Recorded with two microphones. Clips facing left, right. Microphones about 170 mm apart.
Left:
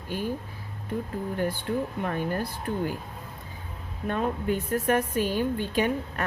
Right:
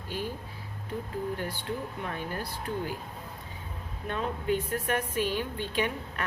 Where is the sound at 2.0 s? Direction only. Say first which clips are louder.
Left 6 dB; 50° left (ahead or behind).